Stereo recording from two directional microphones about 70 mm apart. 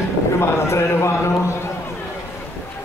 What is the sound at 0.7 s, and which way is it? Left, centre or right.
Speech, left.